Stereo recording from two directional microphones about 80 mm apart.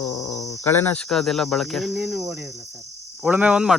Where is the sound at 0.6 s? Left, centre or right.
Left.